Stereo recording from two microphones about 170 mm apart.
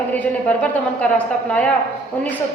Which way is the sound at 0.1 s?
10° left (ahead or behind).